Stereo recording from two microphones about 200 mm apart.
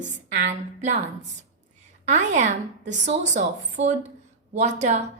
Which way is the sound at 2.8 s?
60° right (ahead or behind).